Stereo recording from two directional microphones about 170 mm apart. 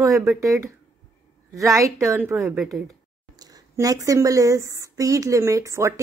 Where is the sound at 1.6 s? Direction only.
20° right (ahead or behind); by 2.9 s centre (ahead or behind).